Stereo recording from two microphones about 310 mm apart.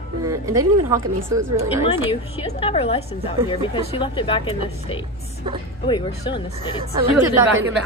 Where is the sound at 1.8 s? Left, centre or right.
Centre.